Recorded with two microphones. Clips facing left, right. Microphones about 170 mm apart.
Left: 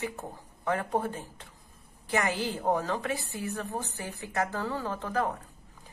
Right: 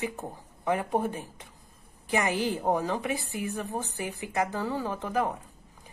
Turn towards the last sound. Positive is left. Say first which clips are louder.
# right 1 dB
turn(degrees=-15)  # may be behind; listen again after turning